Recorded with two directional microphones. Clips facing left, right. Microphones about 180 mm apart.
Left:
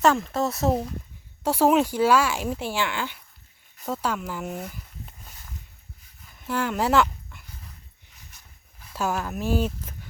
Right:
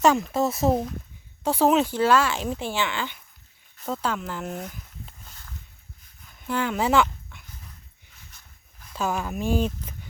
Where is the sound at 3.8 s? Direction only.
5° left (ahead or behind).